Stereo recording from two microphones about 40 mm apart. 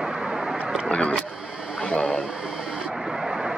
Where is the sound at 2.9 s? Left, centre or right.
Centre.